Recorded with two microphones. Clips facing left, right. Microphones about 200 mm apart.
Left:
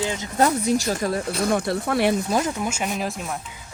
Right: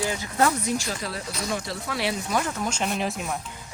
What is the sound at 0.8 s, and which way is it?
Speech, 45° left (ahead or behind).